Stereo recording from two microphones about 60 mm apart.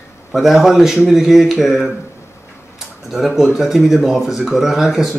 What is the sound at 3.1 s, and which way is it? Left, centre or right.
Speech, centre.